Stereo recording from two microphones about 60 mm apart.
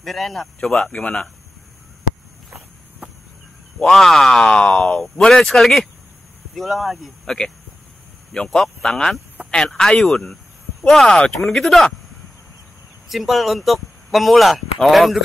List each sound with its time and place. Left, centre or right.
0.0 s speech: centre
3.9 s speech: centre
4.6 s speech: left
5.2 s speech: centre
7.2 s speech: centre
13.1 s speech: centre